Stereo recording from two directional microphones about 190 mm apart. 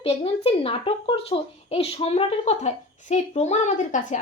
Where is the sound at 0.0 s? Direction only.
30° left (ahead or behind).